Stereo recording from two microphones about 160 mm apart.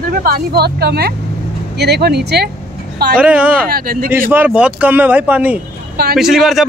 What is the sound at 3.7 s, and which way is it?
Speech, 65° right (ahead or behind).